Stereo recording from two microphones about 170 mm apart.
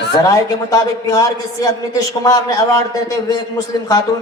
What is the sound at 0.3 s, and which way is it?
A woman's voice, 20° left (ahead or behind).